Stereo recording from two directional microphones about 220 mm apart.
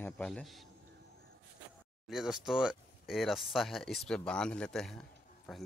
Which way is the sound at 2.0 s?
Centre (ahead or behind).